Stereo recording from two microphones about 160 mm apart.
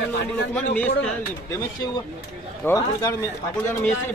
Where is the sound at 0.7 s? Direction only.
10° left (ahead or behind).